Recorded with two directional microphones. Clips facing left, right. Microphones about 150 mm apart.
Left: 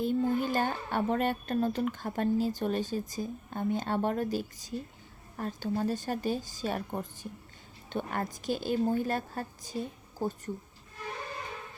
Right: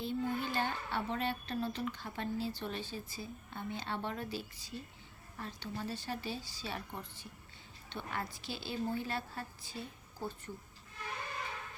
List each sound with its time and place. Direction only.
0.0 s speech: 45° left (ahead or behind)